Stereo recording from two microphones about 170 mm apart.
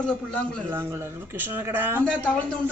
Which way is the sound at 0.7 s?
15° right (ahead or behind).